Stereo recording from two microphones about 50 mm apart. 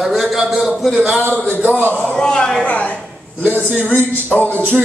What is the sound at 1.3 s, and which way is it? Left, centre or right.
Speech, left.